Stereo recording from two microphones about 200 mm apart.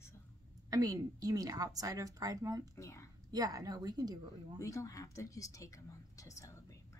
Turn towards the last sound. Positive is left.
turn(degrees=15)  # may be behind; listen again after turning